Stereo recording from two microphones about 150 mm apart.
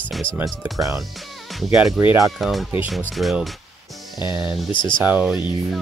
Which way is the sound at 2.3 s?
Centre (ahead or behind).